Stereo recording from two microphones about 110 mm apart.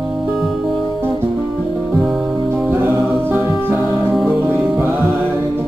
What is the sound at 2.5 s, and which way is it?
Music, 20° right (ahead or behind).